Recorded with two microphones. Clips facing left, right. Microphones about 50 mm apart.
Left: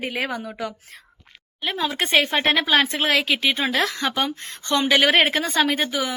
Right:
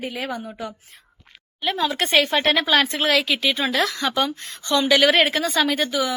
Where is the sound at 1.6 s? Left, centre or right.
Centre.